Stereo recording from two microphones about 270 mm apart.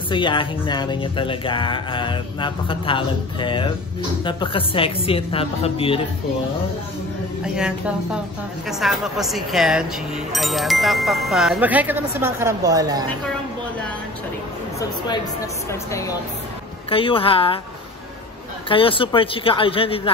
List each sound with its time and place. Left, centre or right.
0.1 s a sound: centre
4.2 s speech: centre
7.5 s speech: centre
15.7 s a sound: centre
16.9 s speech: centre
18.7 s speech: centre